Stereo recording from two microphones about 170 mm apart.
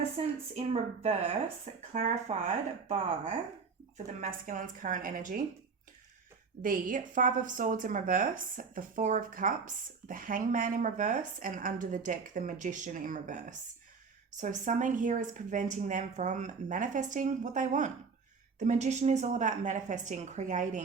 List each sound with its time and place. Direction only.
0.5 s speech: 40° right (ahead or behind)
1.9 s speech: 45° right (ahead or behind)
3.9 s speech: 45° right (ahead or behind)
6.6 s speech: 55° right (ahead or behind)